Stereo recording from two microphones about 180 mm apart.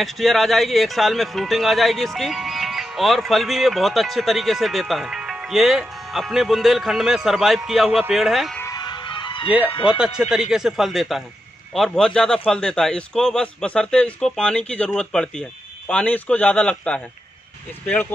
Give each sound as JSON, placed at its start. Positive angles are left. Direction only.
{"t": 0.0, "sound": "speech", "side_deg": 0}
{"t": 8.5, "sound": "music", "side_deg": 20}
{"t": 9.8, "sound": "a man's voice", "side_deg": -5}